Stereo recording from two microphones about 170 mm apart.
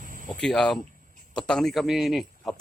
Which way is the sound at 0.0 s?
50° right (ahead or behind).